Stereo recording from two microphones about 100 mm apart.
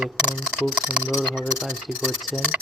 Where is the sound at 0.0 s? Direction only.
10° right (ahead or behind).